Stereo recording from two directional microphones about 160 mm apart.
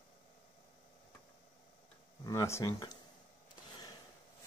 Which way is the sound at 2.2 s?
20° left (ahead or behind).